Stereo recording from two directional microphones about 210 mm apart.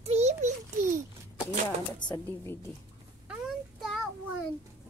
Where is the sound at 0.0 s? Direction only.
30° right (ahead or behind).